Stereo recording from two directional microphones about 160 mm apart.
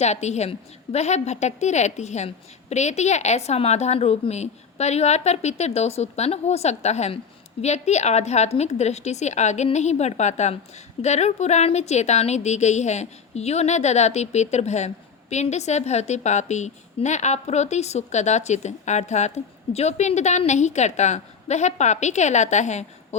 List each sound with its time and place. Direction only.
0.0 s a woman's voice: 45° left (ahead or behind)